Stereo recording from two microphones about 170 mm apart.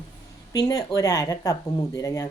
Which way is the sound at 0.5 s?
20° left (ahead or behind).